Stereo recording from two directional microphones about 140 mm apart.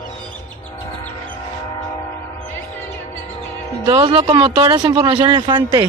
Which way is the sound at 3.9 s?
35° right (ahead or behind).